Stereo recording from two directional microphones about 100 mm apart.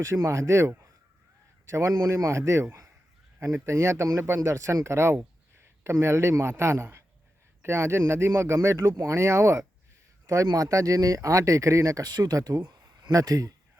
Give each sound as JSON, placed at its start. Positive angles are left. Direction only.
{"t": 0.0, "sound": "speech", "side_deg": -30}